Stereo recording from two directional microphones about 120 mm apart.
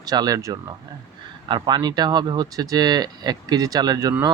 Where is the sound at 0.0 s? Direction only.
30° right (ahead or behind).